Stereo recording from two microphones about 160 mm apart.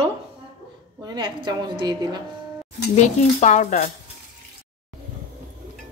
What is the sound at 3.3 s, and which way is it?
Speech, 45° left (ahead or behind).